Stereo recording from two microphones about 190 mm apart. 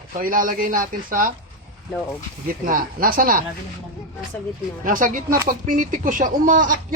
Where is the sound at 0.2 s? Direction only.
45° right (ahead or behind).